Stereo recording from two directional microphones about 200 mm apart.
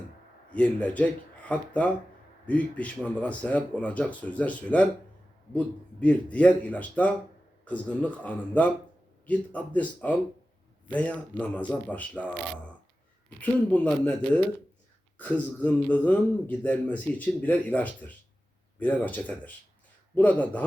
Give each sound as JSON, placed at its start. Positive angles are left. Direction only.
{"t": 0.5, "sound": "speech", "side_deg": 5}